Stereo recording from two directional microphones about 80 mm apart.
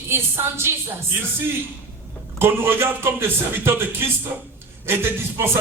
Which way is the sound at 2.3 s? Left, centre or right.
Right.